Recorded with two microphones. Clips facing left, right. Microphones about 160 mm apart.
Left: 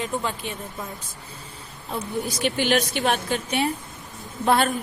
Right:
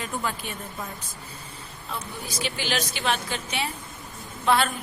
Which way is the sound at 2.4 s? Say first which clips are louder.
Left 6 dB; 55° left (ahead or behind).